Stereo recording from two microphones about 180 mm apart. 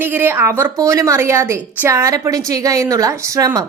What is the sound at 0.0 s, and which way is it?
A woman's voice, 10° right (ahead or behind).